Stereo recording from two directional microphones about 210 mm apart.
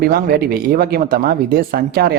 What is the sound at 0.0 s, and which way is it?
Speech, 45° right (ahead or behind).